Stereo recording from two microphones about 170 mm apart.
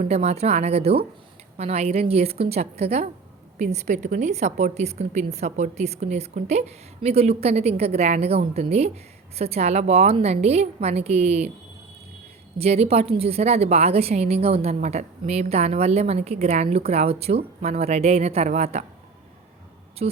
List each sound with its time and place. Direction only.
0.1 s a woman's voice: 40° right (ahead or behind)
12.5 s a woman's voice: 35° right (ahead or behind)
20.0 s a woman's voice: 40° right (ahead or behind)